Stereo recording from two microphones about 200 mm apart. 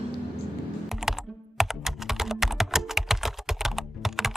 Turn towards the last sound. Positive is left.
turn(degrees=0)  # may be behind; listen again after turning